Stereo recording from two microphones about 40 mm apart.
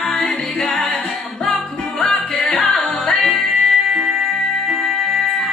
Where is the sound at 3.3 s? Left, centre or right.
Centre.